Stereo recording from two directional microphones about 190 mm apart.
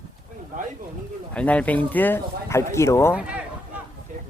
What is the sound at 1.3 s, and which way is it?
Speech, 5° left (ahead or behind).